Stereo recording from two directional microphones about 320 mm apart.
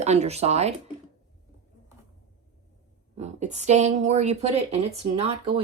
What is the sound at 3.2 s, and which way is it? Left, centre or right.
A woman's voice, right.